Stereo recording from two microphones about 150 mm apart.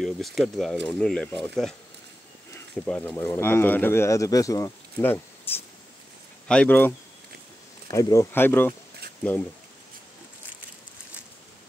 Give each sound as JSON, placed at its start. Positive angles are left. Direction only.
{"t": 0.0, "sound": "speech", "side_deg": 0}
{"t": 7.9, "sound": "speech", "side_deg": 20}